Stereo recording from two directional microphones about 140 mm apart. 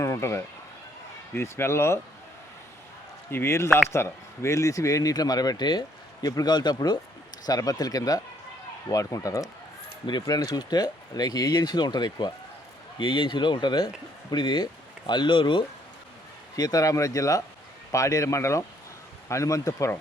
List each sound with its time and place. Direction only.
0.0 s speech: 20° left (ahead or behind)
3.2 s speech: 15° left (ahead or behind)